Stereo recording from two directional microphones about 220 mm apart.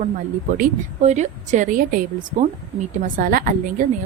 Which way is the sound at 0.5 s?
35° right (ahead or behind).